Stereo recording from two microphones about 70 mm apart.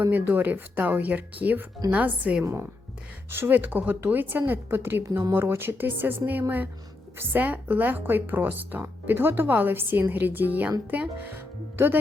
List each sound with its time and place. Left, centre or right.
0.0 s speech: right
2.4 s speech: right
5.0 s speech: right
5.3 s speech: right